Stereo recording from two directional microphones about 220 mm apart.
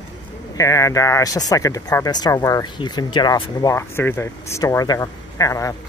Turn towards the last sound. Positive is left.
turn(degrees=15)  # may be behind; listen again after turning